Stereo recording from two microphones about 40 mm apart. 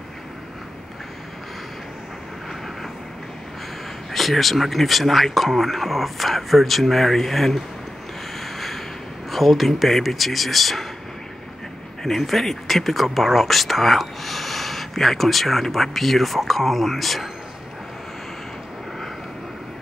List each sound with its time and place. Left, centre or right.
4.1 s speech: centre
8.4 s snort: centre
9.3 s speech: centre
12.0 s speech: centre